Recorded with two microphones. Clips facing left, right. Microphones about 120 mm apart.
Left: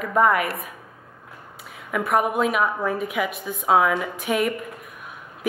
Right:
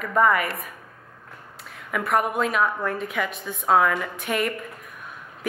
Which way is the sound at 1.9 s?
5° left (ahead or behind).